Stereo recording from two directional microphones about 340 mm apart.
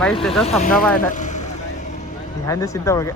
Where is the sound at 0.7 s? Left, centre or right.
Centre.